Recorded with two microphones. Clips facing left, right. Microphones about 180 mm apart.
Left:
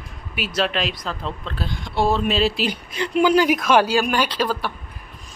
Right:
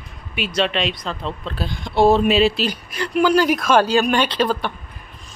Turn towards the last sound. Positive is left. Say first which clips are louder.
# right 3 dB
turn(degrees=5)  # may be behind; listen again after turning